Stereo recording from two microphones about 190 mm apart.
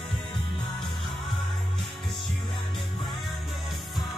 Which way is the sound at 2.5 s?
25° left (ahead or behind).